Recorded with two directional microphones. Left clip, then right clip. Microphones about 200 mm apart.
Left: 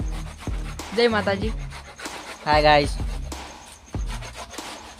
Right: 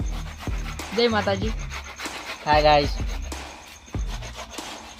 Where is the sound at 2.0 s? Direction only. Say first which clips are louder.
Even; 5° left (ahead or behind).